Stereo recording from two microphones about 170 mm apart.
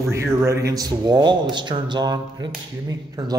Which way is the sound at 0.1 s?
15° right (ahead or behind).